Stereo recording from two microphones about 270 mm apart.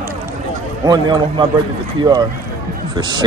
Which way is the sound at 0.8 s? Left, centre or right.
Centre.